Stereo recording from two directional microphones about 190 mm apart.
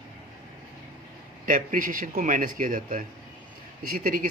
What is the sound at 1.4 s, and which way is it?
Speech, 45° right (ahead or behind).